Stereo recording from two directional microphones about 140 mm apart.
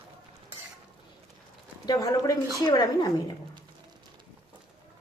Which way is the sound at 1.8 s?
25° left (ahead or behind).